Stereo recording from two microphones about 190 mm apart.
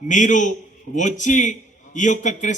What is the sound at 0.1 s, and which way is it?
Speech, 40° left (ahead or behind).